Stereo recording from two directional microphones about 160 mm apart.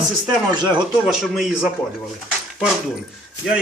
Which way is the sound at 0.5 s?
30° right (ahead or behind).